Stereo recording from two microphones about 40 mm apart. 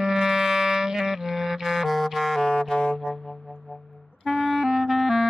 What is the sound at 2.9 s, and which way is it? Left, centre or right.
Music, centre.